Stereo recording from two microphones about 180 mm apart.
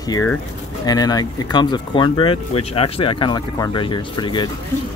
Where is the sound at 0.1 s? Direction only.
15° left (ahead or behind).